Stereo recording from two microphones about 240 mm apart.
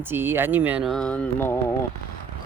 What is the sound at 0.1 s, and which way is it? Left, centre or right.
Speech, centre.